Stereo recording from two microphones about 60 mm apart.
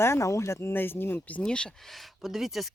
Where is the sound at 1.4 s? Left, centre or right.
Centre.